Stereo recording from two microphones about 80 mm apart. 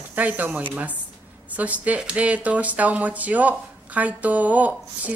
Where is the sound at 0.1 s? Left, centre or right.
Right.